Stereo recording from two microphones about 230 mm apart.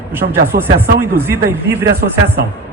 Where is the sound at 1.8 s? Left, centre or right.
Right.